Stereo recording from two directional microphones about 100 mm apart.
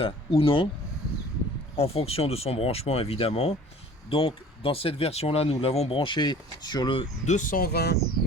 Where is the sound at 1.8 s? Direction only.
80° left.